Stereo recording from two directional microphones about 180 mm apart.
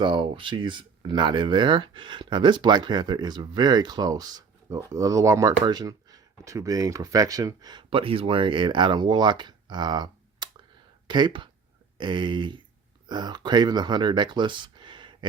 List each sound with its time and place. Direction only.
0.0 s speech: 25° right (ahead or behind)